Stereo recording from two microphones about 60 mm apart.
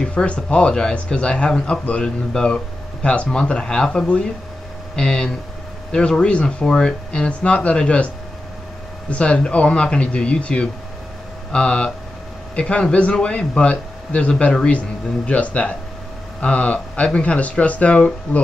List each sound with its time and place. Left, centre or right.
0.0 s speech: centre
9.1 s a man's voice: centre